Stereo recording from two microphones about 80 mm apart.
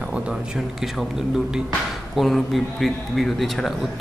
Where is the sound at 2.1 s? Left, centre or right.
Centre.